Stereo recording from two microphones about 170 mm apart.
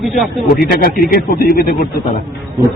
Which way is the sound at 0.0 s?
Centre (ahead or behind).